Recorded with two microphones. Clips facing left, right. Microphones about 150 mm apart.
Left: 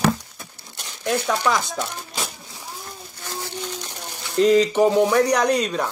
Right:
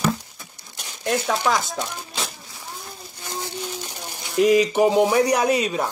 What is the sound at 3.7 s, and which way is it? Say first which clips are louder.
Speech: even; 10° right (ahead or behind).